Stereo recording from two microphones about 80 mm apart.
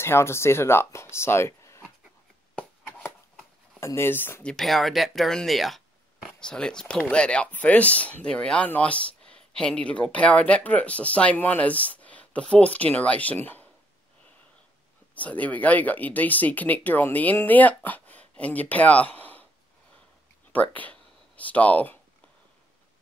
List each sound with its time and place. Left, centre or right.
0.0 s speech: left
3.8 s speech: left
4.4 s speech: centre
4.6 s speech: centre; by 13.7 s left
15.1 s speech: centre
20.5 s speech: centre